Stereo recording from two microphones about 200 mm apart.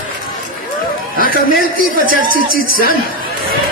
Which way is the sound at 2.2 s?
45° right (ahead or behind).